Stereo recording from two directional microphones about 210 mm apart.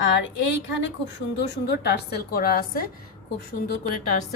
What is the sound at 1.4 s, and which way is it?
Speech, 55° left (ahead or behind).